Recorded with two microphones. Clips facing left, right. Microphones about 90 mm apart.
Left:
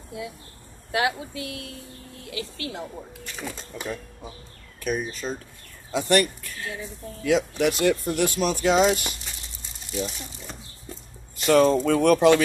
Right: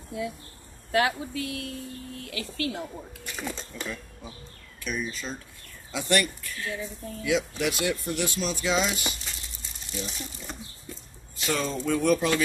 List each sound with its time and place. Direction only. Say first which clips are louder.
0.9 s speech: even; 20° left (ahead or behind)
3.3 s speech: even; 5° left (ahead or behind)
4.7 s speech: left 5 dB; 45° left (ahead or behind)
7.2 s speech: left 5 dB; 50° left (ahead or behind)
11.4 s speech: left 10 dB; 55° left (ahead or behind)